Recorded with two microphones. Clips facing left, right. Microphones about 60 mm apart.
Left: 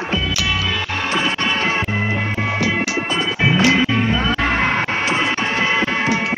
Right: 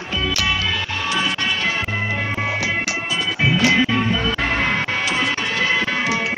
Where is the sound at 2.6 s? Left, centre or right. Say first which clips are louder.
Left 3 dB; centre.